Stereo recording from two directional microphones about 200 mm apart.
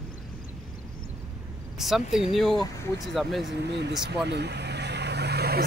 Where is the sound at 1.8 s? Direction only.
Centre (ahead or behind).